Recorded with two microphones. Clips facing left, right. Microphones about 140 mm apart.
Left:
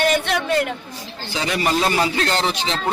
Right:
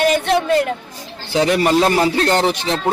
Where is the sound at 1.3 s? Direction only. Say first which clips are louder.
Right 7 dB; 55° right (ahead or behind).